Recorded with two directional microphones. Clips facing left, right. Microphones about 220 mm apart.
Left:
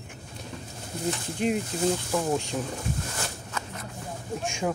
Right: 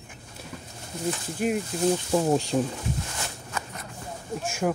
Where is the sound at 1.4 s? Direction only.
5° right (ahead or behind).